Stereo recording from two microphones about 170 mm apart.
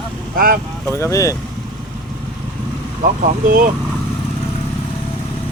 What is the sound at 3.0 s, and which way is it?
Speech, 50° right (ahead or behind).